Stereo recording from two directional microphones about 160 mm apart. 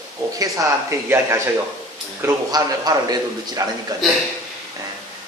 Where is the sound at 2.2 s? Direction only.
25° right (ahead or behind).